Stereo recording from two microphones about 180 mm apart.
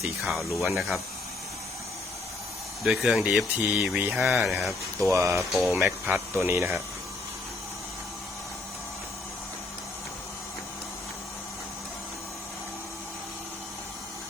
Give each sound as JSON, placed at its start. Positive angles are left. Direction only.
{"t": 0.0, "sound": "speech", "side_deg": 0}
{"t": 2.8, "sound": "speech", "side_deg": -5}
{"t": 5.1, "sound": "speech", "side_deg": -15}
{"t": 5.4, "sound": "speech", "side_deg": 0}
{"t": 5.8, "sound": "speech", "side_deg": -10}